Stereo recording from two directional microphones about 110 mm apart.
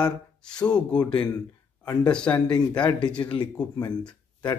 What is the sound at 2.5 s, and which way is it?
Speech, 40° left (ahead or behind).